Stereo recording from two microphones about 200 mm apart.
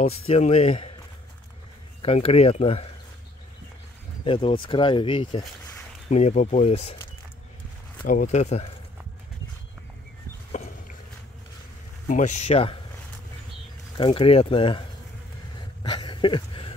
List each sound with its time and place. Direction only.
0.3 s speech: 30° left (ahead or behind)
2.0 s speech: 30° left (ahead or behind)
4.2 s speech: 25° left (ahead or behind)
8.1 s speech: 40° left (ahead or behind)
10.5 s a sound: 35° left (ahead or behind)
12.1 s speech: 35° left (ahead or behind)
13.9 s speech: 25° left (ahead or behind)
15.8 s a sound: 25° left (ahead or behind)